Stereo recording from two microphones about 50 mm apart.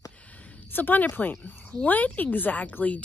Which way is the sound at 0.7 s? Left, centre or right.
Left.